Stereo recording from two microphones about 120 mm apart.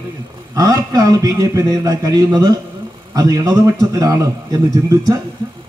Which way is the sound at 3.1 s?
30° right (ahead or behind).